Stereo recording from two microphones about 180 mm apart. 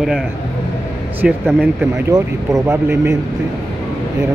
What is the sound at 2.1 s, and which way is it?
Speech, 20° right (ahead or behind).